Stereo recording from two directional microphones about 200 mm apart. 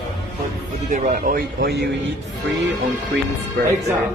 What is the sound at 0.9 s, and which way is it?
Speech, 40° right (ahead or behind).